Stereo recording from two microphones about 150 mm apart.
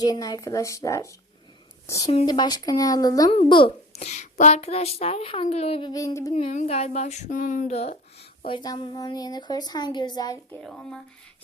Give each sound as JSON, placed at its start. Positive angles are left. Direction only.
{"t": 0.0, "sound": "speech", "side_deg": 25}
{"t": 2.2, "sound": "speech", "side_deg": 30}
{"t": 3.3, "sound": "speech", "side_deg": 35}
{"t": 5.9, "sound": "speech", "side_deg": 25}
{"t": 6.3, "sound": "speech", "side_deg": 45}
{"t": 8.4, "sound": "speech", "side_deg": 30}
{"t": 10.6, "sound": "speech", "side_deg": 5}